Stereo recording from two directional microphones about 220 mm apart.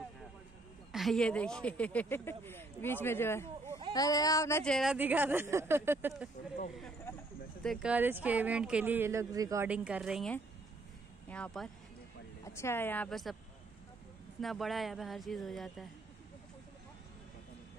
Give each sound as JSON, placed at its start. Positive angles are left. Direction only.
{"t": 0.9, "sound": "speech", "side_deg": 0}
{"t": 4.7, "sound": "speech", "side_deg": -5}
{"t": 7.6, "sound": "speech", "side_deg": 0}
{"t": 14.4, "sound": "speech", "side_deg": 0}